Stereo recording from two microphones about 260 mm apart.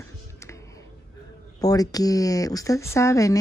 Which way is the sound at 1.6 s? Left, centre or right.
Centre.